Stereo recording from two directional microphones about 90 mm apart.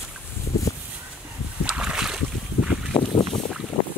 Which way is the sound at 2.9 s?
85° left.